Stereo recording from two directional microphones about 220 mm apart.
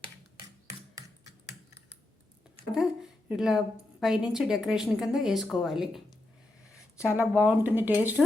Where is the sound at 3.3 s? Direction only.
Centre (ahead or behind).